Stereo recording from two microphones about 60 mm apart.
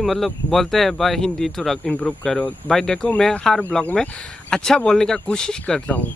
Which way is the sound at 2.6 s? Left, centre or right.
Centre.